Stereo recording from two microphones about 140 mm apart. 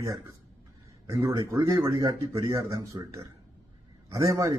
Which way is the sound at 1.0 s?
20° right (ahead or behind).